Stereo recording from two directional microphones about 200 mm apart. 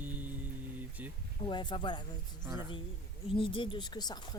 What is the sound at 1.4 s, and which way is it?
Speech, 25° left (ahead or behind).